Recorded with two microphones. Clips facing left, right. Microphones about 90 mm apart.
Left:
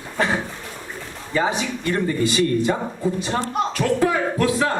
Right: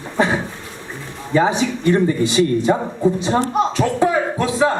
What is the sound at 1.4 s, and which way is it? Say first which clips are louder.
Speech: right 5 dB; centre (ahead or behind).